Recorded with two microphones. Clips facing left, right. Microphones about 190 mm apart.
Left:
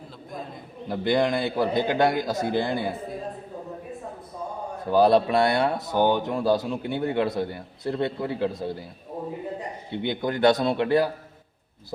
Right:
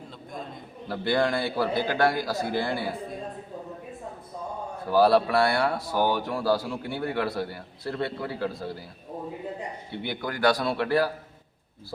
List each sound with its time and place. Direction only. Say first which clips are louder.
0.9 s speech: left 2 dB; 20° left (ahead or behind)
4.9 s speech: left 2 dB; 20° left (ahead or behind)
9.9 s speech: left 7 dB; 20° left (ahead or behind)